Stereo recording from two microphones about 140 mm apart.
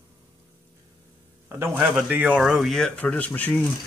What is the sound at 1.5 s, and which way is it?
A man's voice, 15° right (ahead or behind).